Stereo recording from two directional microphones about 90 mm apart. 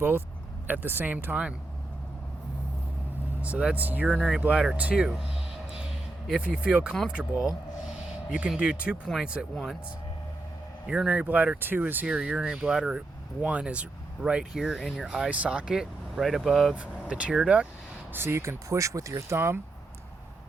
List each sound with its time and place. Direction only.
0.7 s speech: 20° right (ahead or behind)
3.4 s speech: 15° right (ahead or behind)
4.1 s speech: 5° right (ahead or behind)
6.2 s speech: 5° right (ahead or behind)
9.4 s speech: centre (ahead or behind)
10.8 s speech: 10° right (ahead or behind)
16.7 s speech: 15° right (ahead or behind)
18.1 s speech: 25° right (ahead or behind)